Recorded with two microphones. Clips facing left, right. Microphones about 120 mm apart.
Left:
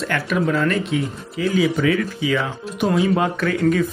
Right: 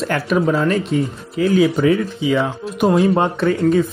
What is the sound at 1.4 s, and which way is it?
Speech, 45° right (ahead or behind).